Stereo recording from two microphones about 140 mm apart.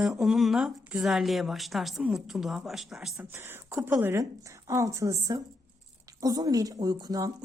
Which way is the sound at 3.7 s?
20° right (ahead or behind).